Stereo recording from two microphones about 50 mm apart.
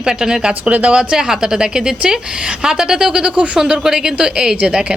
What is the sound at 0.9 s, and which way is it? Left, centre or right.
Speech, centre.